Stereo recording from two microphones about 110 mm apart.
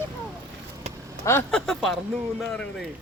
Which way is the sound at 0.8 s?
75° right (ahead or behind).